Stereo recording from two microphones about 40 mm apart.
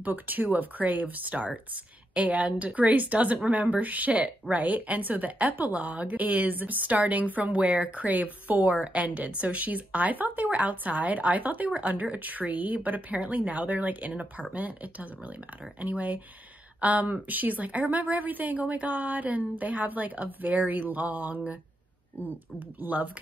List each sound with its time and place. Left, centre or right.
0.0 s a woman's voice: right
7.9 s a woman's voice: right
22.8 s a woman's voice: right